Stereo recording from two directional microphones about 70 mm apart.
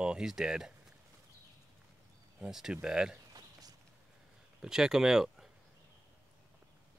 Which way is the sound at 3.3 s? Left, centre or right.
Right.